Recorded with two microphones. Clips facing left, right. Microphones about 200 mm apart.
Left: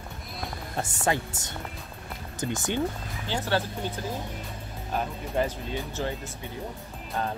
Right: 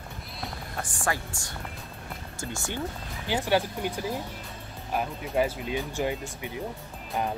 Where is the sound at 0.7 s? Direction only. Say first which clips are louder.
Left 4 dB; 25° left (ahead or behind).